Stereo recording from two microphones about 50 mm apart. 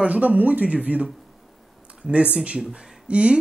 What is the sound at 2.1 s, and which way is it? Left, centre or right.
Speech, right.